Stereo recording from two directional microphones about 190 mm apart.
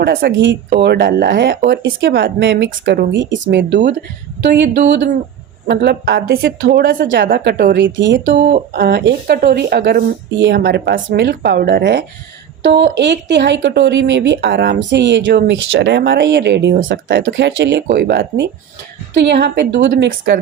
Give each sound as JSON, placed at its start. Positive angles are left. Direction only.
{"t": 0.0, "sound": "speech", "side_deg": -60}
{"t": 8.2, "sound": "speech", "side_deg": -45}
{"t": 17.9, "sound": "speech", "side_deg": -55}